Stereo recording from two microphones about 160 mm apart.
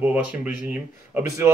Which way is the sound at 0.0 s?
10° right (ahead or behind).